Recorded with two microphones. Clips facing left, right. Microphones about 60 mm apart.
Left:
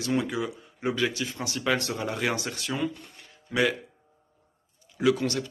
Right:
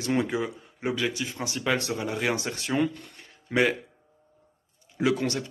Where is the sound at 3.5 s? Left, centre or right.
Right.